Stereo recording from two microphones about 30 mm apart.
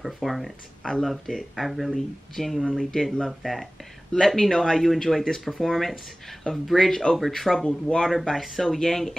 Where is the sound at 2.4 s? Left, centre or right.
Centre.